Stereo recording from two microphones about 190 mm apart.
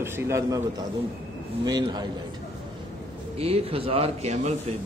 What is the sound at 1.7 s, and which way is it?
Speech, 20° right (ahead or behind).